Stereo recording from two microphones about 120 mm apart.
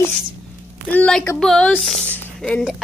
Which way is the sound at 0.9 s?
10° left (ahead or behind).